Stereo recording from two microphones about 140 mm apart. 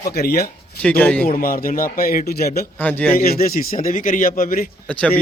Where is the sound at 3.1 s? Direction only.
90° left.